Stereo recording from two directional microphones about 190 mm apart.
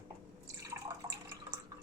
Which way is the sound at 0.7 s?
15° right (ahead or behind).